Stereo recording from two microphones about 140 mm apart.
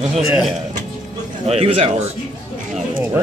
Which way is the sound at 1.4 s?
45° right (ahead or behind).